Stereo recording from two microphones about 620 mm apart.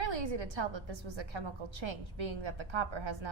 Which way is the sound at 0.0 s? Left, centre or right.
Right.